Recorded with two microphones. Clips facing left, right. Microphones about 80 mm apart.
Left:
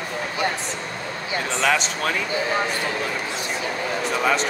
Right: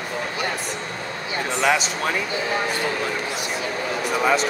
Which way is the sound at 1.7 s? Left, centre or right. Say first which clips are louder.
Even; centre.